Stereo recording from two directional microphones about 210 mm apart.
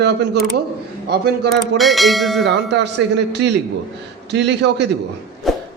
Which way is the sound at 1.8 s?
Centre (ahead or behind).